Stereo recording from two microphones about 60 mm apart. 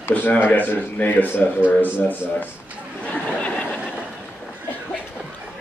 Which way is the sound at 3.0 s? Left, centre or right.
Left.